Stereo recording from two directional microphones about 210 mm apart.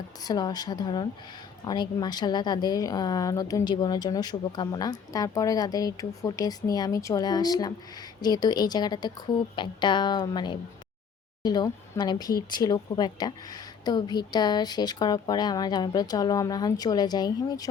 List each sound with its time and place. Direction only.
0.2 s a woman's voice: 20° left (ahead or behind)